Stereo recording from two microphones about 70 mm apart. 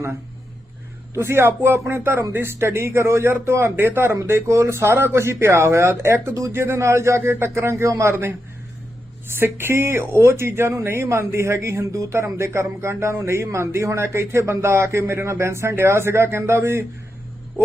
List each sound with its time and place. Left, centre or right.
1.1 s speech: right